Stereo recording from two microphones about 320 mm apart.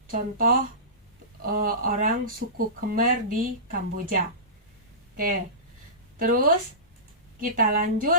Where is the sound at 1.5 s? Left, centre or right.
Right.